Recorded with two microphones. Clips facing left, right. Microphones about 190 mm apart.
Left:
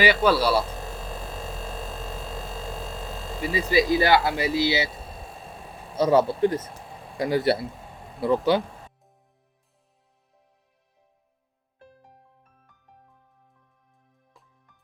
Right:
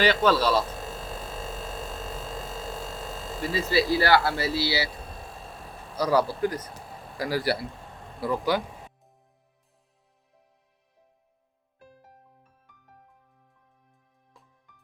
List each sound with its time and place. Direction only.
0.0 s speech: 10° left (ahead or behind)
1.0 s hum: 10° left (ahead or behind)
3.3 s speech: 15° left (ahead or behind)
5.9 s speech: 25° left (ahead or behind)